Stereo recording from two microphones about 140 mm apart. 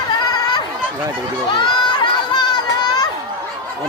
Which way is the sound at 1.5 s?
35° left (ahead or behind).